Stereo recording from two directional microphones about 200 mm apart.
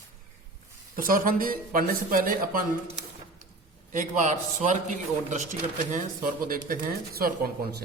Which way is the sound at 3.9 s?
40° right (ahead or behind).